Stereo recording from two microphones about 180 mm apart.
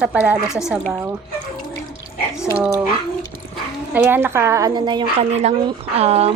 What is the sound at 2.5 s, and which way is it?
Speech, 10° right (ahead or behind).